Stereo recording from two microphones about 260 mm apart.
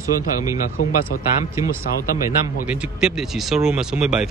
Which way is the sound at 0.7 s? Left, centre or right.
Left.